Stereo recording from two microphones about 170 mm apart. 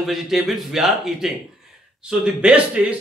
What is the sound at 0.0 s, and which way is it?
Speech, centre (ahead or behind).